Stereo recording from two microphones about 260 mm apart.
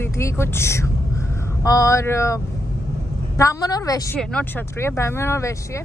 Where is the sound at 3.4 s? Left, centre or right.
Centre.